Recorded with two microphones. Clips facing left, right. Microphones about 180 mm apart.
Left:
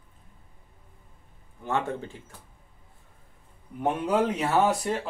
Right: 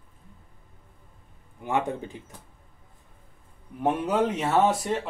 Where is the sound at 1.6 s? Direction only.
15° right (ahead or behind).